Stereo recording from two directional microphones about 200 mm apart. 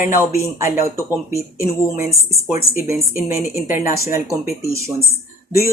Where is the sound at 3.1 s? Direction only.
10° right (ahead or behind).